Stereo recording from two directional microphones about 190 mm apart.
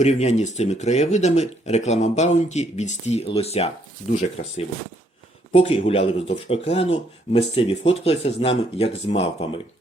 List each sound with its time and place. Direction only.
0.0 s speech: 35° left (ahead or behind)